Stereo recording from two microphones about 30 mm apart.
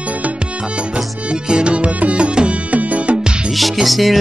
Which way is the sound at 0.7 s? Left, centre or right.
Right.